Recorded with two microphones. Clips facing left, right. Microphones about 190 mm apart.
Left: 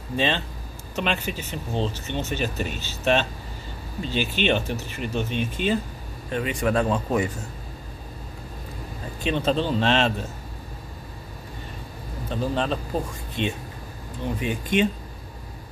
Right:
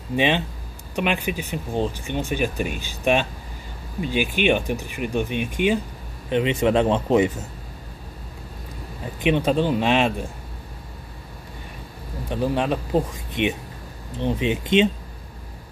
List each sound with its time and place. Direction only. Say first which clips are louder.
0.1 s speech: right 4 dB; 15° right (ahead or behind)
9.2 s speech: right 4 dB; 15° right (ahead or behind)
12.3 s speech: right 3 dB; 15° right (ahead or behind)